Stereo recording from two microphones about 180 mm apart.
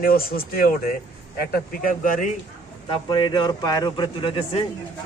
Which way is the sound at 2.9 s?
25° left (ahead or behind).